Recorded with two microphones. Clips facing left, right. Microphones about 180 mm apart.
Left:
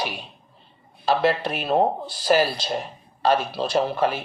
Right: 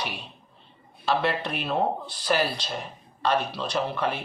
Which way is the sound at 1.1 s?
35° left (ahead or behind).